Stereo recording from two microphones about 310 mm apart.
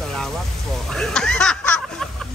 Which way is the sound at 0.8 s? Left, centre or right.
Centre.